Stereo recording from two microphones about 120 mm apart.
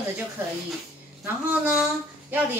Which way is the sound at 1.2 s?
15° right (ahead or behind).